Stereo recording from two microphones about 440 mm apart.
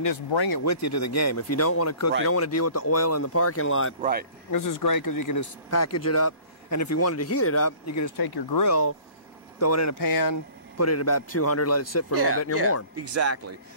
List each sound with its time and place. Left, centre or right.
0.3 s speech: left
0.6 s speech: left
4.0 s speech: centre
4.5 s speech: left
8.2 s speech: left
8.6 s speech: left
10.8 s speech: left
12.9 s speech: right